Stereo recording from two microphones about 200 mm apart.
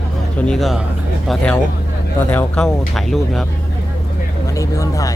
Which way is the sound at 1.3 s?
5° left (ahead or behind).